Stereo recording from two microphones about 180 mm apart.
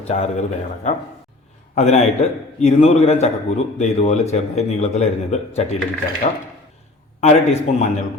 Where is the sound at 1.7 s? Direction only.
40° left (ahead or behind).